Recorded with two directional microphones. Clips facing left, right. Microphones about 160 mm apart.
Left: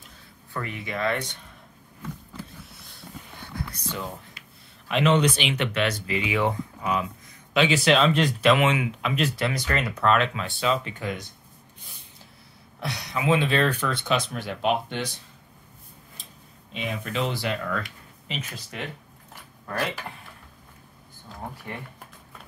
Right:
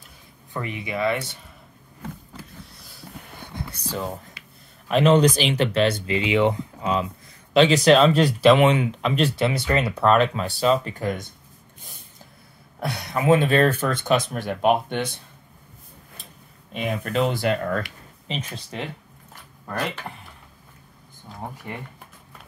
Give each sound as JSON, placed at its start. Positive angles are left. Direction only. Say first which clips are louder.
{"t": 0.5, "sound": "speech", "louder": "right 3 dB", "side_deg": -20}
{"t": 2.7, "sound": "a sound", "louder": "right 2 dB", "side_deg": 0}
{"t": 3.5, "sound": "a sound", "louder": "right 2 dB", "side_deg": -35}
{"t": 4.8, "sound": "speech", "louder": "right 5 dB", "side_deg": -40}
{"t": 7.5, "sound": "speech", "louder": "right 5 dB", "side_deg": -40}
{"t": 12.8, "sound": "speech", "louder": "right 5 dB", "side_deg": -50}
{"t": 16.7, "sound": "speech", "louder": "right 5 dB", "side_deg": -50}
{"t": 18.3, "sound": "speech", "louder": "right 4 dB", "side_deg": -30}